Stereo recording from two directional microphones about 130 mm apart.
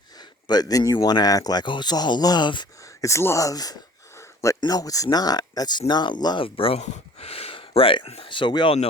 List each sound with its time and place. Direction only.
0.2 s speech: 30° left (ahead or behind)
4.2 s a sound: 20° left (ahead or behind)
4.6 s speech: 30° left (ahead or behind); by 6.8 s 45° left (ahead or behind)
6.8 s speech: 60° left (ahead or behind); by 8.7 s 35° left (ahead or behind)